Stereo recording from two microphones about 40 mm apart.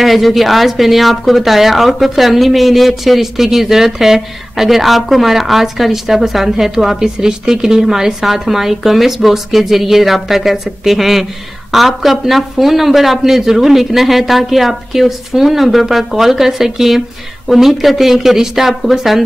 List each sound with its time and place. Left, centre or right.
0.0 s a woman's voice: centre